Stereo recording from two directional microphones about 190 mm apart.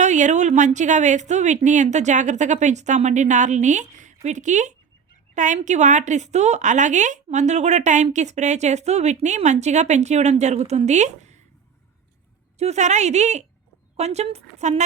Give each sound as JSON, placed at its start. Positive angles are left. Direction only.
{"t": 0.0, "sound": "a woman's voice", "side_deg": -40}
{"t": 12.5, "sound": "a woman's voice", "side_deg": -35}